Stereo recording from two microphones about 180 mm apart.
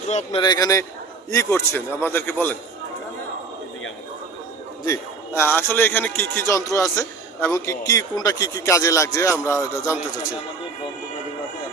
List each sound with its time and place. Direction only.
0.1 s a man's voice: 35° left (ahead or behind)
0.4 s a man's voice: 20° left (ahead or behind)
4.9 s a man's voice: 15° left (ahead or behind)